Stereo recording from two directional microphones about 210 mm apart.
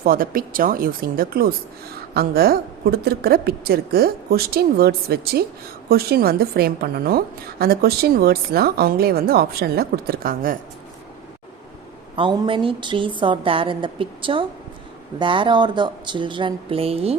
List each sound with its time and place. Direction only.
0.0 s a woman's voice: 45° right (ahead or behind)
12.1 s a woman's voice: 25° right (ahead or behind)